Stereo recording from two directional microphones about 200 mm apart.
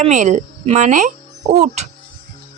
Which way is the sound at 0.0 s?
35° right (ahead or behind).